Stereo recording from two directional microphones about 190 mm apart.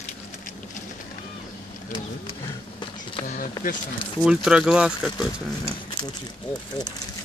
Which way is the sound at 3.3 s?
45° left (ahead or behind).